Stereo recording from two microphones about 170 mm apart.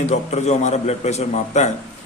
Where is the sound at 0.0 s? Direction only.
40° left (ahead or behind).